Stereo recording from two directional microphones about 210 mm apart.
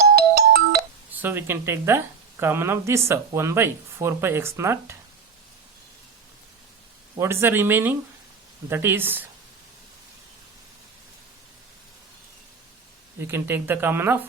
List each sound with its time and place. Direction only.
0.2 s ringtone: 45° right (ahead or behind)
1.2 s speech: 10° right (ahead or behind)
7.2 s speech: 10° right (ahead or behind)
13.1 s speech: 10° right (ahead or behind)